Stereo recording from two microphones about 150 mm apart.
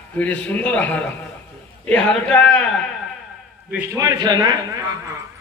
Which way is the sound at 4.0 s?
25° right (ahead or behind).